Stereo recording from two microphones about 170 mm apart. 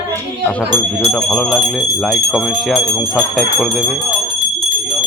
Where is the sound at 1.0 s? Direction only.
Centre (ahead or behind).